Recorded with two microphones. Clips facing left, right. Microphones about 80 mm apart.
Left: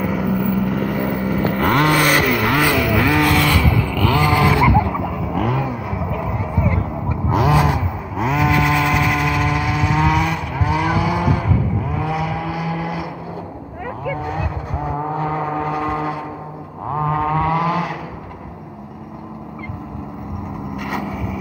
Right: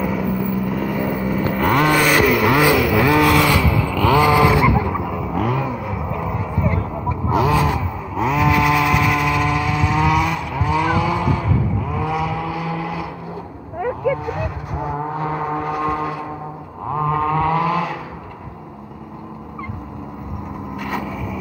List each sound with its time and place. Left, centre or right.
0.1 s vehicle: left
2.0 s vehicle: centre
5.4 s vehicle: centre
6.8 s vehicle: left
8.2 s chainsaw: centre
11.9 s vehicle: centre
14.2 s vehicle: left